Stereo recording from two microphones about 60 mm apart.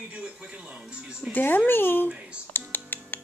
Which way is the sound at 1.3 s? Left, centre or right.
Left.